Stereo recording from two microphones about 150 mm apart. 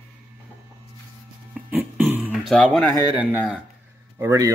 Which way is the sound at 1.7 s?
15° right (ahead or behind).